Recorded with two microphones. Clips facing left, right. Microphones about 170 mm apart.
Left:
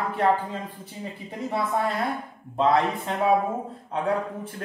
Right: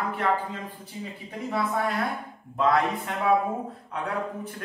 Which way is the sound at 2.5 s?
25° left (ahead or behind).